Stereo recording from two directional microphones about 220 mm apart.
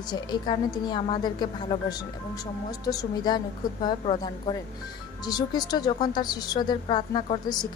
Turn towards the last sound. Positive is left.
turn(degrees=20)  # may be behind; listen again after turning